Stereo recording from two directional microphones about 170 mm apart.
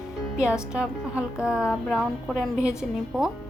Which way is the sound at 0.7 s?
5° right (ahead or behind).